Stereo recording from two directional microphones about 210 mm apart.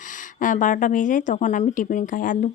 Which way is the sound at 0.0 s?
40° left (ahead or behind).